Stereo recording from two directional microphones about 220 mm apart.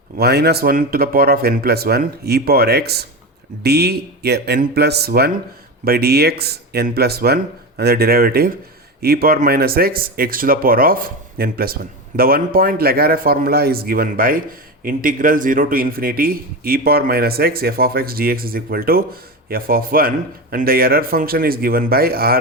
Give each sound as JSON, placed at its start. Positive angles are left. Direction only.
{"t": 0.2, "sound": "a man's voice", "side_deg": -45}